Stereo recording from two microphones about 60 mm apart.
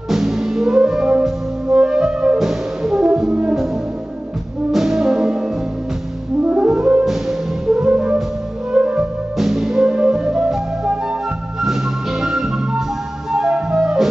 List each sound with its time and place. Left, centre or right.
0.1 s music: centre
4.7 s brass instrument: centre
6.6 s brass instrument: centre
7.1 s music: centre
9.4 s music: centre